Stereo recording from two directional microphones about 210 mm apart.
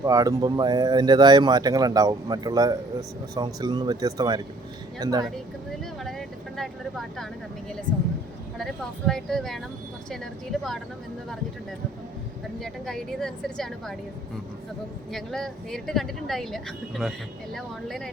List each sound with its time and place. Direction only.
0.0 s a woman's voice: 15° right (ahead or behind)
5.8 s vehicle: centre (ahead or behind)
8.5 s a woman's voice: centre (ahead or behind)
12.5 s a woman's voice: centre (ahead or behind)
15.1 s a woman's voice: centre (ahead or behind)